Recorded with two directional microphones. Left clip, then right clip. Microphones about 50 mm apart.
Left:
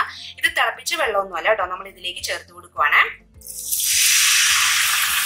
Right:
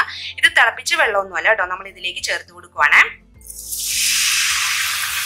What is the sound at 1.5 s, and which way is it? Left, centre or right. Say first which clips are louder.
Speech: right 3 dB; right.